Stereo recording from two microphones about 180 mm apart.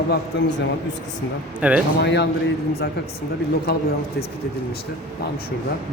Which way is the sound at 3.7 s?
60° left (ahead or behind).